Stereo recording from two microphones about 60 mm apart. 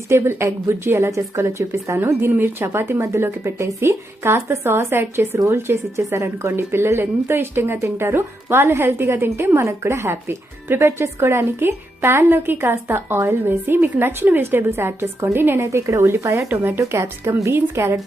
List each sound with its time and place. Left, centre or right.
0.1 s speech: right
2.0 s speech: right
15.5 s speech: right
16.5 s speech: right
16.8 s a woman's voice: right
17.5 s speech: right